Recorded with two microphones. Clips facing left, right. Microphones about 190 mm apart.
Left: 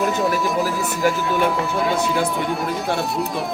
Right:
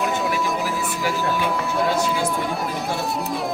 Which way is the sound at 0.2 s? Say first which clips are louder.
Left 3 dB; centre (ahead or behind).